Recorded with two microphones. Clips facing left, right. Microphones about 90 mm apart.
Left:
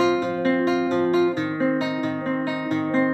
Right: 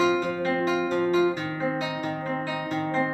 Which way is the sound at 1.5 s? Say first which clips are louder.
Left 6 dB; 25° left (ahead or behind).